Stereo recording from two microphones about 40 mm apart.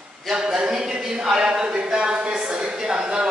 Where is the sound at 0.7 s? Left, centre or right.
Centre.